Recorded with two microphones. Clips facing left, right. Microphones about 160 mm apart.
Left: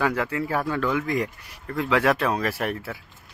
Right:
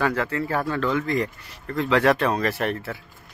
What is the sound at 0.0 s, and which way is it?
A man's voice, 10° left (ahead or behind).